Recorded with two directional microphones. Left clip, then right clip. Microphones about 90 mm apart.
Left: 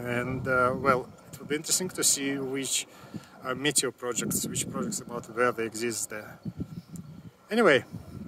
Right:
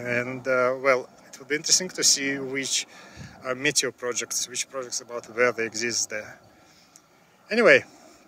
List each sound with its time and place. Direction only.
0.0 s speech: 10° left (ahead or behind)
7.4 s speech: 10° left (ahead or behind)